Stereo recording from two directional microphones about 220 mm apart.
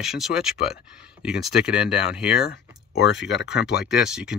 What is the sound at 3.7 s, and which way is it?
Speech, 5° right (ahead or behind).